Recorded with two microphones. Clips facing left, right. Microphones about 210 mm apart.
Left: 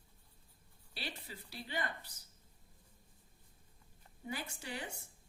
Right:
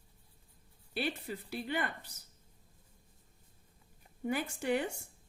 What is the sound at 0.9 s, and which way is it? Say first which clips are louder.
Speech: right 11 dB; 55° right (ahead or behind).